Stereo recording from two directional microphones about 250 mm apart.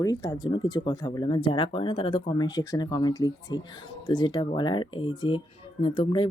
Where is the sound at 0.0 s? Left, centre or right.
Centre.